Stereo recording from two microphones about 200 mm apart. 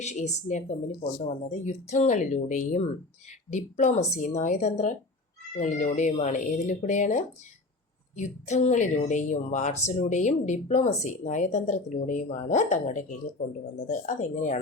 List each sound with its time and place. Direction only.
0.0 s a woman's voice: 35° left (ahead or behind)